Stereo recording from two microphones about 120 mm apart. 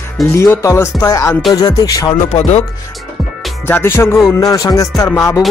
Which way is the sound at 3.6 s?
15° left (ahead or behind).